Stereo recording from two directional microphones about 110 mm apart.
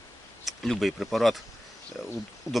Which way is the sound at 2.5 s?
30° left (ahead or behind).